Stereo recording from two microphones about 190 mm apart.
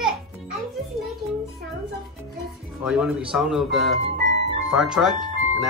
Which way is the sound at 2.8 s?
5° right (ahead or behind).